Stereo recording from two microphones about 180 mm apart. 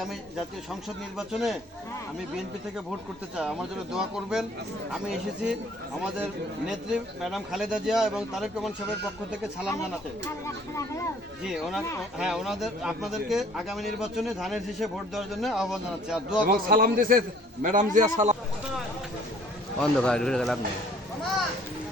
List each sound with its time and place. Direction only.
0.0 s a man's voice: centre (ahead or behind)
3.9 s a man's voice: 5° right (ahead or behind)
6.7 s a man's voice: centre (ahead or behind)
10.4 s speech: 15° left (ahead or behind)
11.4 s a man's voice: 5° right (ahead or behind)
16.5 s a man's voice: 55° right (ahead or behind)
19.8 s a man's voice: 5° left (ahead or behind)